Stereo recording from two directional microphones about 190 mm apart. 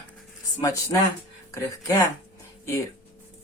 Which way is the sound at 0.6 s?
15° left (ahead or behind).